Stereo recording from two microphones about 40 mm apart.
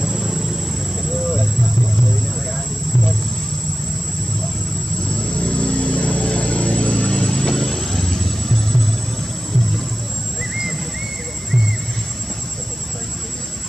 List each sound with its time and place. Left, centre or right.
0.0 s vehicle: centre
5.0 s vehicle: left; by 8.8 s centre
10.5 s a sound: centre